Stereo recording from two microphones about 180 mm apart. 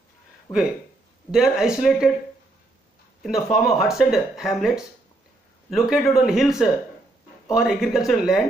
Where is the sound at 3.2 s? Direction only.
Centre (ahead or behind).